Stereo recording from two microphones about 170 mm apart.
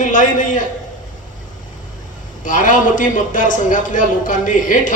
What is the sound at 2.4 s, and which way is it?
A man's voice, 50° left (ahead or behind).